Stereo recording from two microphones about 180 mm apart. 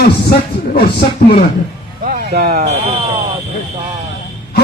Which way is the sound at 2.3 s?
55° right (ahead or behind).